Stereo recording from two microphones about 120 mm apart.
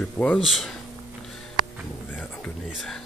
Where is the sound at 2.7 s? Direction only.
5° right (ahead or behind).